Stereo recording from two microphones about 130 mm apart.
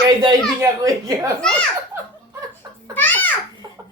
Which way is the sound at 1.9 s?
15° right (ahead or behind).